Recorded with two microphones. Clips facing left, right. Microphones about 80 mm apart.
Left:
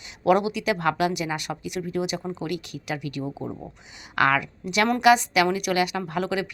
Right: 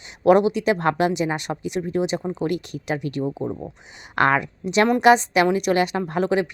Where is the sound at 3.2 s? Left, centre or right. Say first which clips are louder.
Right 6 dB; centre.